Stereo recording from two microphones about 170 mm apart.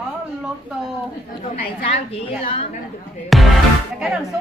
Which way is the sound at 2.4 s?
35° left (ahead or behind).